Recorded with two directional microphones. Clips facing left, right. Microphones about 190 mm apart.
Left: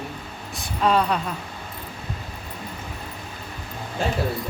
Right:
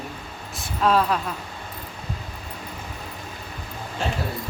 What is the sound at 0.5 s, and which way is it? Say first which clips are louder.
Speech: even; centre (ahead or behind).